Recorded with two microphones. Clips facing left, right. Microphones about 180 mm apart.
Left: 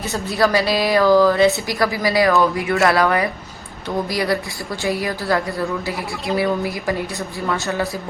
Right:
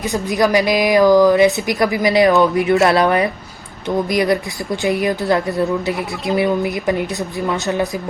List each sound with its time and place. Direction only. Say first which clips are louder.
0.0 s a woman's voice: right 2 dB; 15° right (ahead or behind)